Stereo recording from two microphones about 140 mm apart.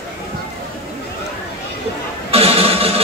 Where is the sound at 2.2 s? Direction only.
45° right (ahead or behind).